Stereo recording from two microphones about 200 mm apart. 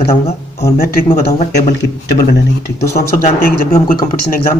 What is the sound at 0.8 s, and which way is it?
Speech, 50° left (ahead or behind).